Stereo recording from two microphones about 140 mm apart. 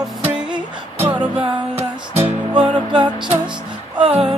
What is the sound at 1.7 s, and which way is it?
Music, 15° right (ahead or behind).